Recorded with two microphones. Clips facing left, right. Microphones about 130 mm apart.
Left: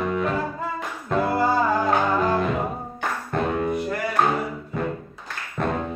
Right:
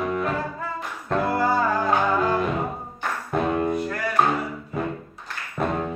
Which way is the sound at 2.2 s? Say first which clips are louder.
Left 1 dB; centre (ahead or behind).